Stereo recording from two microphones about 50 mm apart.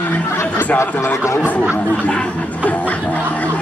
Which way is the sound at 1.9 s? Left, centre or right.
Left.